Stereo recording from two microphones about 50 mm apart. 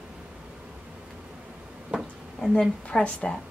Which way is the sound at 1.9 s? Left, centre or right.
Right.